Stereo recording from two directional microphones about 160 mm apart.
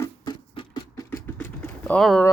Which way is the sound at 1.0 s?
15° left (ahead or behind).